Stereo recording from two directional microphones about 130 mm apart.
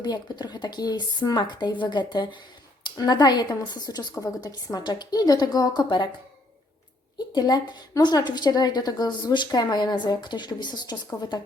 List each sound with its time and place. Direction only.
0.0 s a woman's voice: 30° left (ahead or behind)
7.3 s a woman's voice: 30° left (ahead or behind)